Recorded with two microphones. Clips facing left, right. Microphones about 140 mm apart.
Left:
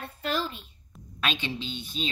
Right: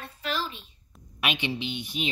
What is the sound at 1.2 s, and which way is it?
Speech, 15° right (ahead or behind).